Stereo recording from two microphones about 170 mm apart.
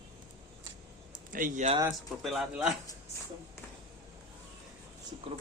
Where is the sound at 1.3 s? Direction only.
50° right (ahead or behind).